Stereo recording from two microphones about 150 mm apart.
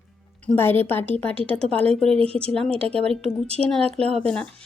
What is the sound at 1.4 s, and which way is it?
Speech, 40° right (ahead or behind).